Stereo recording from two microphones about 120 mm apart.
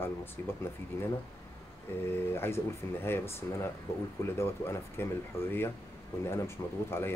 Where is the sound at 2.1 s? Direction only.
20° left (ahead or behind).